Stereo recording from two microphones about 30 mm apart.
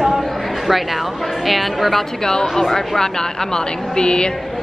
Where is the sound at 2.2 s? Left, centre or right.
Left.